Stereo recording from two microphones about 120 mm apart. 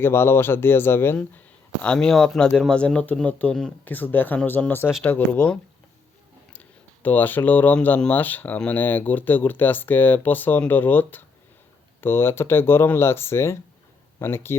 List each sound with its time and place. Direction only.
0.0 s speech: 20° left (ahead or behind)
1.8 s speech: 10° left (ahead or behind)